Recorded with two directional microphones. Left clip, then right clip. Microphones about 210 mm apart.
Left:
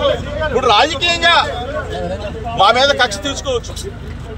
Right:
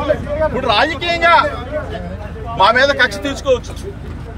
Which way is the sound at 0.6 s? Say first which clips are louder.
Left 6 dB; centre (ahead or behind).